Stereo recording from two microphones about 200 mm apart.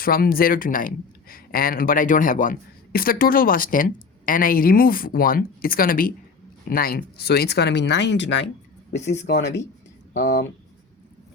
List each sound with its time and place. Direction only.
0.0 s speech: 45° left (ahead or behind)